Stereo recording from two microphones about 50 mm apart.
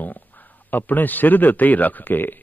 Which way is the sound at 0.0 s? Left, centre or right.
Left.